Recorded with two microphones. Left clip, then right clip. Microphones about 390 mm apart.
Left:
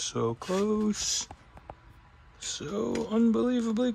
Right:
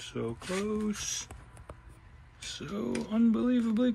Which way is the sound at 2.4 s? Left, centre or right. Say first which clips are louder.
Left 5 dB; centre.